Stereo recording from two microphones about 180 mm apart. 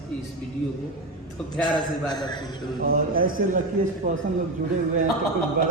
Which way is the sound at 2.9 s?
55° right (ahead or behind).